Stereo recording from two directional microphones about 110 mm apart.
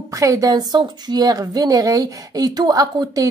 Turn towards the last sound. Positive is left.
turn(degrees=-35)  # may be behind; listen again after turning